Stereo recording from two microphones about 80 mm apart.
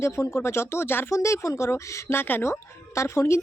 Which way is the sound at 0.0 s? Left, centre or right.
Left.